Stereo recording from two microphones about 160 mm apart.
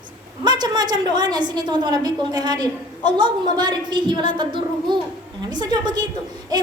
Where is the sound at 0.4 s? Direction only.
25° right (ahead or behind).